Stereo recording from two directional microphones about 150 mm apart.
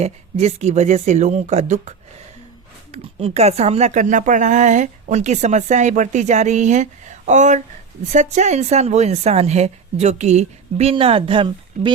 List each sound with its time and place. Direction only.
0.0 s speech: 45° right (ahead or behind)
2.9 s speech: 45° right (ahead or behind)